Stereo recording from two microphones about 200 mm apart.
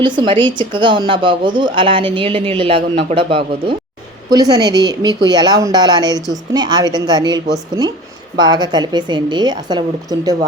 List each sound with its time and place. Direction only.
0.0 s a woman's voice: 25° right (ahead or behind)